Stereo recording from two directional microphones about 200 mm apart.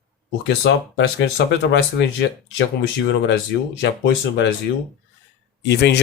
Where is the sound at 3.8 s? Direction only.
65° left (ahead or behind).